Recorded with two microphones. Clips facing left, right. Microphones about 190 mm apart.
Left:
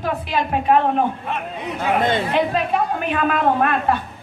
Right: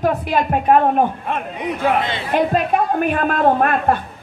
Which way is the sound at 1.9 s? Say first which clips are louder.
Left 3 dB; 50° left (ahead or behind).